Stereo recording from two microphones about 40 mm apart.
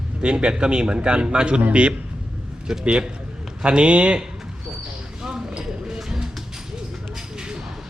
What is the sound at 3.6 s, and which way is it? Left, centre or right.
Speech, right.